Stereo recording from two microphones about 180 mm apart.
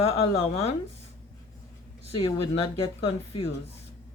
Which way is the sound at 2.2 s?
30° left (ahead or behind).